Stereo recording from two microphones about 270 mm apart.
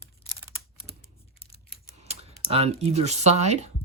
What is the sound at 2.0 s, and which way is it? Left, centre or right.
Speech, right.